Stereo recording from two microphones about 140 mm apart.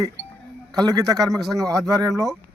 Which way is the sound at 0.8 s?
25° right (ahead or behind).